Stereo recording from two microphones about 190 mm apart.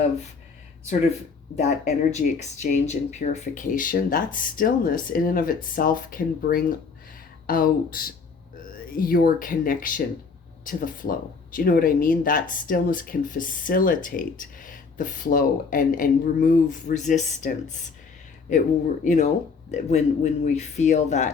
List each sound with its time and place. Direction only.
1.6 s speech: 40° left (ahead or behind)
19.0 s speech: 40° left (ahead or behind)